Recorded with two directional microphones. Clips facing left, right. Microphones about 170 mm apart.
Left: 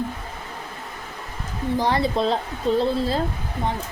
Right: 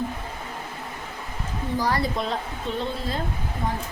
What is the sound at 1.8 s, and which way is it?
A woman's voice, 25° left (ahead or behind).